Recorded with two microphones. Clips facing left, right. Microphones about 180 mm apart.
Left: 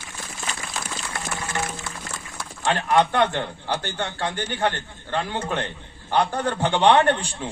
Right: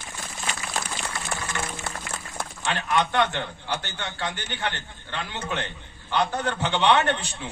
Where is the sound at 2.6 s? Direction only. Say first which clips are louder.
Left 5 dB; 35° left (ahead or behind).